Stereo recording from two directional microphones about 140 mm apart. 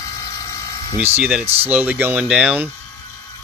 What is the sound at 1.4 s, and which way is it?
Speech, 45° right (ahead or behind).